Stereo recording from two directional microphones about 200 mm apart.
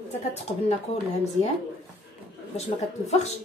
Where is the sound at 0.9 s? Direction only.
30° left (ahead or behind).